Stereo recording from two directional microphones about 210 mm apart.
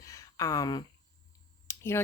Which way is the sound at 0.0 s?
15° left (ahead or behind).